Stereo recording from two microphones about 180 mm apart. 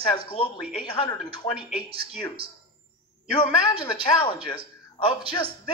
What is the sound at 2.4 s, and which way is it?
Speech, 30° right (ahead or behind).